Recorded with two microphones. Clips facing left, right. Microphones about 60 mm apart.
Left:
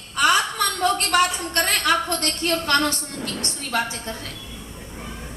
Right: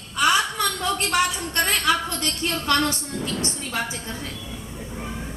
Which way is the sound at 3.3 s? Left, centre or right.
Left.